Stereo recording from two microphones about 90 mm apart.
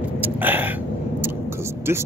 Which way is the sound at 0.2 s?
20° right (ahead or behind).